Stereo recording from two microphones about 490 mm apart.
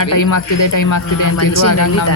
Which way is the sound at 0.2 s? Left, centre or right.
Left.